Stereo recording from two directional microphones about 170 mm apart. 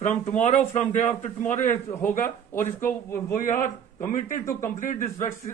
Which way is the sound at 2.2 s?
15° left (ahead or behind).